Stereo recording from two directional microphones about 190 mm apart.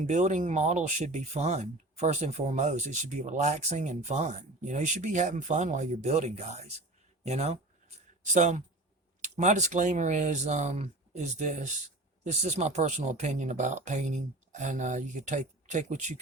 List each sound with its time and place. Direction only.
0.0 s speech: 40° right (ahead or behind)